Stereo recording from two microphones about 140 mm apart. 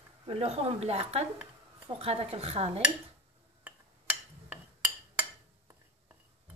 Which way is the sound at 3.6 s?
10° right (ahead or behind).